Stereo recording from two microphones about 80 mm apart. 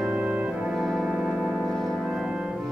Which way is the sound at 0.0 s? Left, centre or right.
Centre.